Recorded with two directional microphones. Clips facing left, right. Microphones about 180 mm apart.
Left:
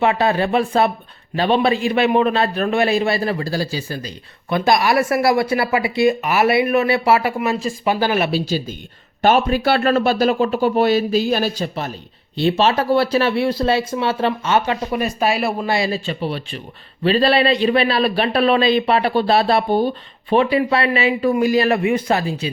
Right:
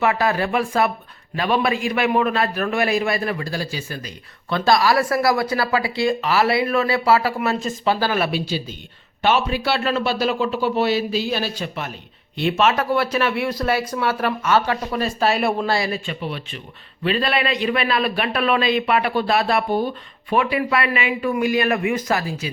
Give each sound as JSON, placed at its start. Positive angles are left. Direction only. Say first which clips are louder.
{"t": 0.0, "sound": "speech", "louder": "left 3 dB", "side_deg": 25}
{"t": 4.4, "sound": "speech", "louder": "left 1 dB", "side_deg": 20}
{"t": 7.3, "sound": "speech", "louder": "left 2 dB", "side_deg": 5}
{"t": 7.9, "sound": "speech", "louder": "left 2 dB", "side_deg": 20}
{"t": 8.3, "sound": "speech", "louder": "left 4 dB", "side_deg": 40}
{"t": 15.9, "sound": "a man's voice", "louder": "left 4 dB", "side_deg": 35}